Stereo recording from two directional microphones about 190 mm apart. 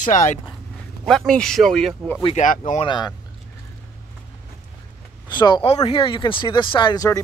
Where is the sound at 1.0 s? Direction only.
5° left (ahead or behind).